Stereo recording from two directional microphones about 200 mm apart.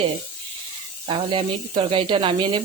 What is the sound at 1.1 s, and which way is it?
Speech, 25° right (ahead or behind).